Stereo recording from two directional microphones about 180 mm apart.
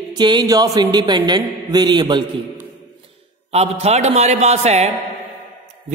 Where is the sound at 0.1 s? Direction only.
25° right (ahead or behind).